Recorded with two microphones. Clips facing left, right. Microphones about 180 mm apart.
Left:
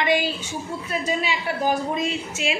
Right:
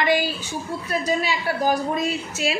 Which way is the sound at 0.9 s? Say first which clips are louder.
Right 2 dB; 40° right (ahead or behind).